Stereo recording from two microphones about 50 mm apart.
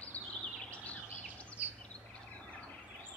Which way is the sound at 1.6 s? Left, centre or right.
Right.